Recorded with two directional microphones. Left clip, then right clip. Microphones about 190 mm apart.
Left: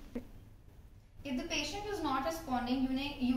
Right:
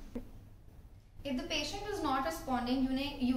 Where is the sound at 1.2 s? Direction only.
10° right (ahead or behind).